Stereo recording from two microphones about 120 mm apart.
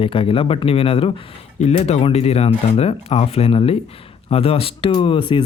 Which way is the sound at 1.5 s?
65° left (ahead or behind).